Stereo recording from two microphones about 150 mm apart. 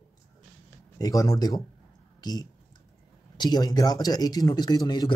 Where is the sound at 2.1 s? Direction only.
25° left (ahead or behind).